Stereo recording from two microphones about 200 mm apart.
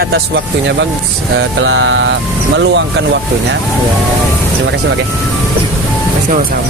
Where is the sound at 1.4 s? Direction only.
75° right (ahead or behind).